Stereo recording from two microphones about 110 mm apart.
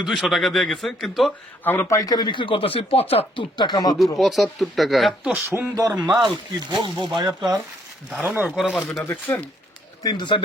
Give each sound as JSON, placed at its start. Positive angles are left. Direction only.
{"t": 0.0, "sound": "speech", "side_deg": 0}
{"t": 1.6, "sound": "speech", "side_deg": 15}
{"t": 1.9, "sound": "speech", "side_deg": 35}
{"t": 3.6, "sound": "speech", "side_deg": 40}
{"t": 4.2, "sound": "speech", "side_deg": 0}
{"t": 5.5, "sound": "speech", "side_deg": -30}
{"t": 6.2, "sound": "speech", "side_deg": -40}
{"t": 8.1, "sound": "speech", "side_deg": -15}
{"t": 9.0, "sound": "speech", "side_deg": 20}
{"t": 10.0, "sound": "speech", "side_deg": 40}